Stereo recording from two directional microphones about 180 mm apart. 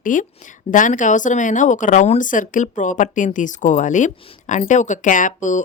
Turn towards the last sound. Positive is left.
turn(degrees=45)  # may be behind; listen again after turning